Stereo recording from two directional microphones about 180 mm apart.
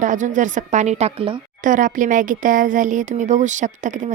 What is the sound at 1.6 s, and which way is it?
Speech, 45° right (ahead or behind).